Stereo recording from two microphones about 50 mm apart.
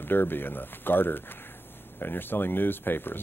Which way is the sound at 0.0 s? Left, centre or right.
Left.